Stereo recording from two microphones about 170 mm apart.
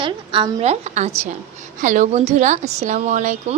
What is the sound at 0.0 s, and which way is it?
A woman's voice, 30° right (ahead or behind).